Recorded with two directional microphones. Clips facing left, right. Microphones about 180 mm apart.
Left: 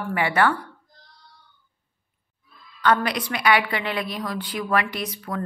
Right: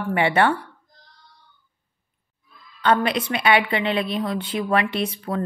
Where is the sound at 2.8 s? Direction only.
25° right (ahead or behind).